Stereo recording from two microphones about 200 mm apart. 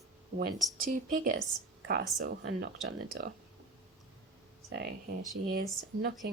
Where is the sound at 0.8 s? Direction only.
45° right (ahead or behind).